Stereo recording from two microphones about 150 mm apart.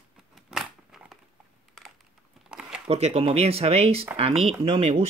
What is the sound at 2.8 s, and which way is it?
Speech, 45° right (ahead or behind).